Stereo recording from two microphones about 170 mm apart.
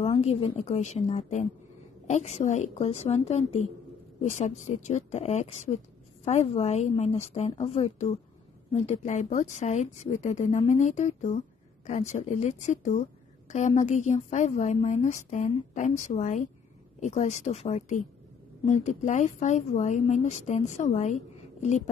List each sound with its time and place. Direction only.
0.2 s a woman's voice: 35° left (ahead or behind)